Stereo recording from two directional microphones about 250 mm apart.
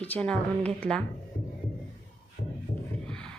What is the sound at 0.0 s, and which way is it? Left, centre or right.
A woman's voice, centre.